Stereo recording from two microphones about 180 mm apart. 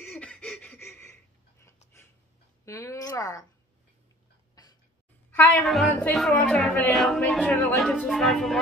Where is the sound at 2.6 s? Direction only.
15° left (ahead or behind).